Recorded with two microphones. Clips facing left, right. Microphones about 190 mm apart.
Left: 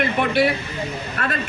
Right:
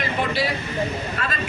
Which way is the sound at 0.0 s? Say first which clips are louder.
Left 5 dB; 60° left (ahead or behind).